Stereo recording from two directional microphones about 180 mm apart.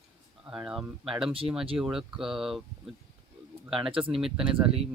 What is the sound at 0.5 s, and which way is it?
Speech, 5° right (ahead or behind).